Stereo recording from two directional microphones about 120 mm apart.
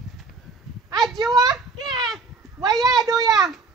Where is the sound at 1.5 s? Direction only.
Centre (ahead or behind).